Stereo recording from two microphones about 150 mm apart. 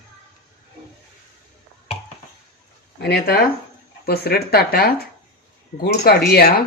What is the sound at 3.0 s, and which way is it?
A woman's voice, 90° left.